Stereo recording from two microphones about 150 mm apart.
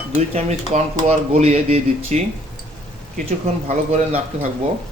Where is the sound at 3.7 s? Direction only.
50° right (ahead or behind).